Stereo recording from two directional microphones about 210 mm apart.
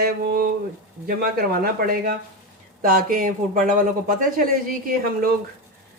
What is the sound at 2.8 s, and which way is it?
Speech, 45° right (ahead or behind).